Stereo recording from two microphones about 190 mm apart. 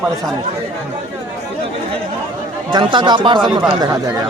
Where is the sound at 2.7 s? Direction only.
25° right (ahead or behind).